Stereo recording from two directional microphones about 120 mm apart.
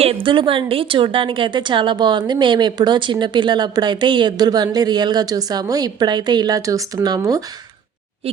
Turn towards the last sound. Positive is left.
turn(degrees=-30)  # may be behind; listen again after turning